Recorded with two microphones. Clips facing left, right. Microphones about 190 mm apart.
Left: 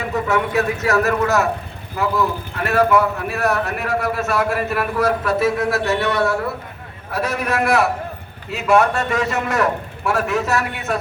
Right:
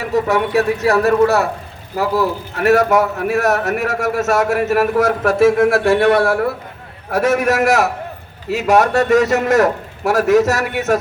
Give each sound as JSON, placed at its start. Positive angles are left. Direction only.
{"t": 0.1, "sound": "a man's voice", "side_deg": -35}